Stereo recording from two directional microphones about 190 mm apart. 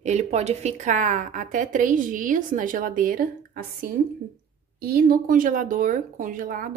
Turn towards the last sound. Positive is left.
turn(degrees=-45)  # may be behind; listen again after turning